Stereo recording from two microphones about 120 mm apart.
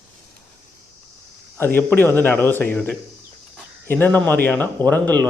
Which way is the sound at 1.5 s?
20° left (ahead or behind).